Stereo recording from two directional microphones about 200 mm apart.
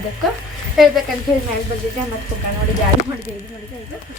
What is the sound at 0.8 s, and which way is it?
Speech, centre (ahead or behind).